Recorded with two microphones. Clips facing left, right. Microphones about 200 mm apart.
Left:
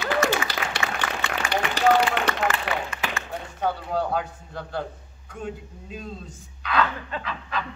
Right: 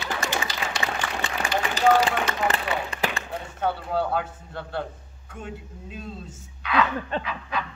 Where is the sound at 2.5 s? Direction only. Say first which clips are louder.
Even; 35° right (ahead or behind).